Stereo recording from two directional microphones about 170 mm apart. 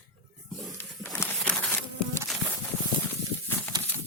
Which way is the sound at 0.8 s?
15° left (ahead or behind).